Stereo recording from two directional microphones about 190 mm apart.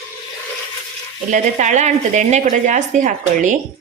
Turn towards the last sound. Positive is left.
turn(degrees=-40)  # may be behind; listen again after turning